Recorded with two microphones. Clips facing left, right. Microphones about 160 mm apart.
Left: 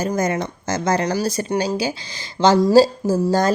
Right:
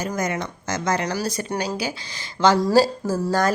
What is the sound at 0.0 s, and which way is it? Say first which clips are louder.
A woman's voice: left 5 dB; 35° left (ahead or behind).